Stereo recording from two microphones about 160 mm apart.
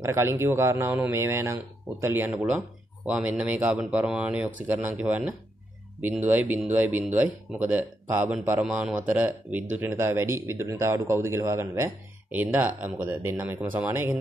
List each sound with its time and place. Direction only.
0.0 s speech: 15° right (ahead or behind)